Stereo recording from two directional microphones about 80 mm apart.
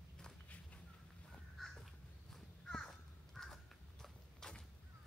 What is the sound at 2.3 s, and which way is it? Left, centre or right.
Crow, centre.